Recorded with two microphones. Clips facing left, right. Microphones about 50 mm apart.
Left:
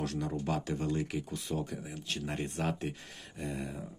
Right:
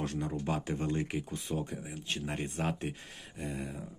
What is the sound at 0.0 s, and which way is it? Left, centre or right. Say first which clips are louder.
Speech: even; right.